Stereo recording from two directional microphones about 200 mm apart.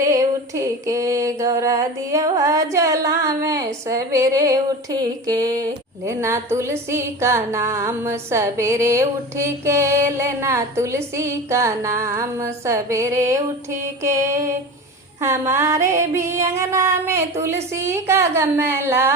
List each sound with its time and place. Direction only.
0.0 s music: 15° right (ahead or behind)